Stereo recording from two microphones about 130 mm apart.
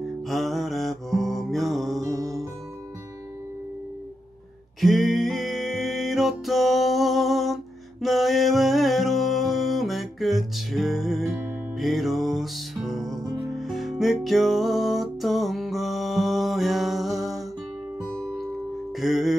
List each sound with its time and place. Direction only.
0.3 s music: centre (ahead or behind)
2.0 s music: 25° right (ahead or behind)
4.7 s music: centre (ahead or behind)